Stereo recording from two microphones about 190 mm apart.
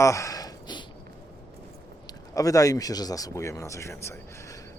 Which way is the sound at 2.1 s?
20° left (ahead or behind).